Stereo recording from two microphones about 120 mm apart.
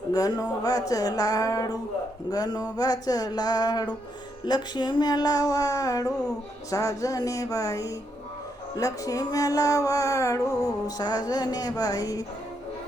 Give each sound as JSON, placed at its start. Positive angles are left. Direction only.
{"t": 0.1, "sound": "music", "side_deg": 30}